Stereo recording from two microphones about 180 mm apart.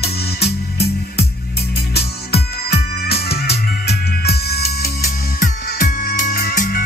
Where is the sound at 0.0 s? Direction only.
65° left (ahead or behind).